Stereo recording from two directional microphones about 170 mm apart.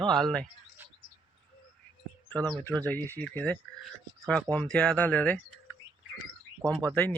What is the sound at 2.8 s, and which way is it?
Speech, 10° left (ahead or behind).